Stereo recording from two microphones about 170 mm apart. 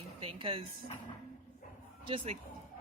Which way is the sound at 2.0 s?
30° right (ahead or behind).